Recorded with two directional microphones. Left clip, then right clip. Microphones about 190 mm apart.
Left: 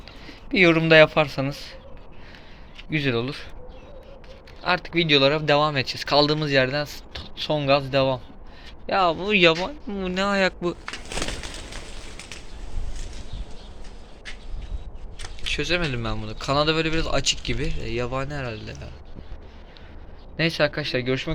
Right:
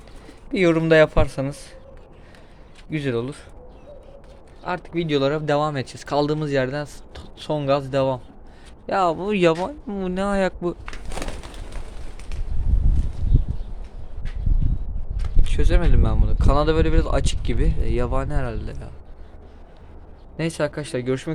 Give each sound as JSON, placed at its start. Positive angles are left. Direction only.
{"t": 0.5, "sound": "speech", "side_deg": -25}
{"t": 2.9, "sound": "speech", "side_deg": -15}
{"t": 4.6, "sound": "speech", "side_deg": -15}
{"t": 15.5, "sound": "speech", "side_deg": -15}
{"t": 20.3, "sound": "speech", "side_deg": -20}